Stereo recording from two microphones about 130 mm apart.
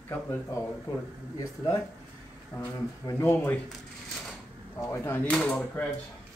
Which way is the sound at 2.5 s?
20° left (ahead or behind).